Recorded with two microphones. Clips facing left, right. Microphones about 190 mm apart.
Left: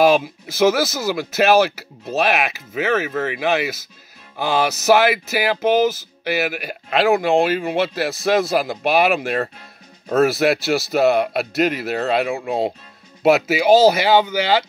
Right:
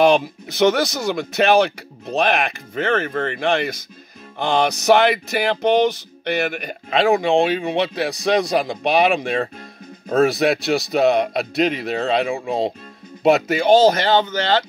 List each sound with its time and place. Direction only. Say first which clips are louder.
0.0 s speech: even; centre (ahead or behind)